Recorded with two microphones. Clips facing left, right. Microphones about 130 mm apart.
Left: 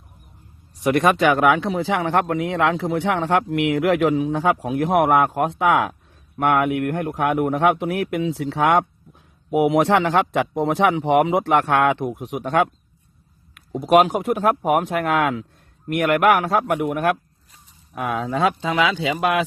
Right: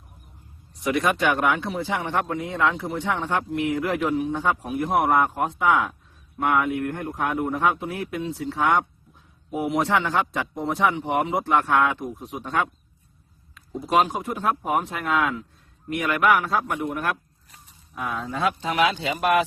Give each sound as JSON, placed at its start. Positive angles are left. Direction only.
{"t": 0.9, "sound": "speech", "side_deg": 55}
{"t": 1.3, "sound": "a man's voice", "side_deg": 90}